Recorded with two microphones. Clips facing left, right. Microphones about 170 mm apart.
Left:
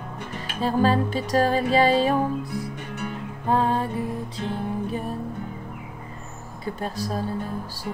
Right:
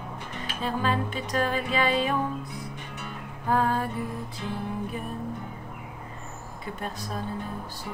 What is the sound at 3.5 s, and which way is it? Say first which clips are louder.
Music: left 3 dB; 25° left (ahead or behind).